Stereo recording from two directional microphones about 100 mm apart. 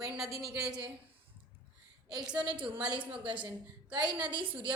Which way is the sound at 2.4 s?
55° right (ahead or behind).